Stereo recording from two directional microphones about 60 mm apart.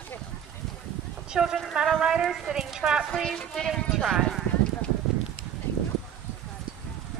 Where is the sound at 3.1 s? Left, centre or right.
Centre.